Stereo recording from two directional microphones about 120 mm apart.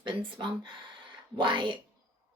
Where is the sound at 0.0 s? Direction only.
45° right (ahead or behind).